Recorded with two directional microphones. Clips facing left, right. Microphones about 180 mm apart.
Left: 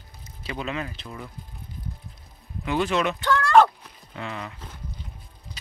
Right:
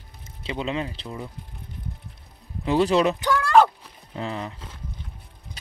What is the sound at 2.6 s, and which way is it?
Speech, 30° right (ahead or behind).